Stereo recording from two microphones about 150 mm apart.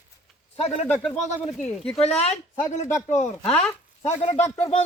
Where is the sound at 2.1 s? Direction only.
45° left (ahead or behind).